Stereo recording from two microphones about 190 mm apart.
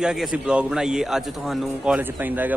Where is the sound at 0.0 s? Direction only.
5° right (ahead or behind).